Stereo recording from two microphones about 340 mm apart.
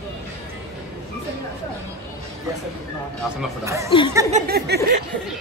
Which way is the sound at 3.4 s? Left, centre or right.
Centre.